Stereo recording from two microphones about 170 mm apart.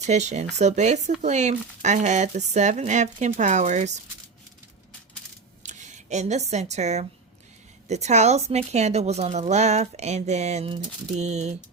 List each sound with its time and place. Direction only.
0.0 s speech: 40° right (ahead or behind)
5.6 s speech: 45° right (ahead or behind)